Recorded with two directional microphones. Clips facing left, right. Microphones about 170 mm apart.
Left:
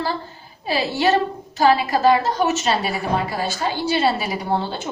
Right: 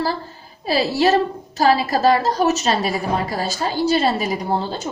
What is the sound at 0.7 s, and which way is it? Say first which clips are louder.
A woman's voice: right 2 dB; 35° right (ahead or behind).